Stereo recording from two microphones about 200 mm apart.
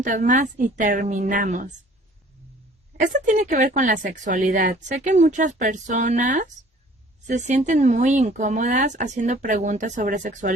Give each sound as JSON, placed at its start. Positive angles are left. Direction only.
{"t": 0.0, "sound": "speech", "side_deg": -40}
{"t": 3.0, "sound": "speech", "side_deg": -40}